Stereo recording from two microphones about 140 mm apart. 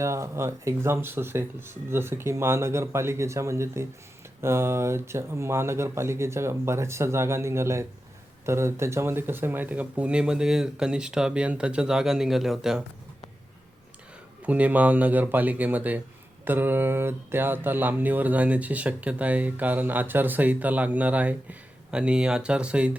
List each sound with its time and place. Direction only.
0.0 s speech: 20° right (ahead or behind); by 12.8 s 5° right (ahead or behind)
14.4 s speech: 10° right (ahead or behind)